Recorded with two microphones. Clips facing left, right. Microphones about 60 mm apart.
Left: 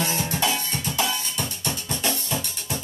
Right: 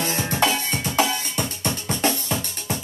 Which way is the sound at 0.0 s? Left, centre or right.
Right.